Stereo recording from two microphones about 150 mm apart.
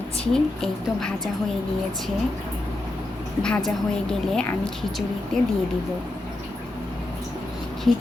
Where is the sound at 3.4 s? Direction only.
5° left (ahead or behind).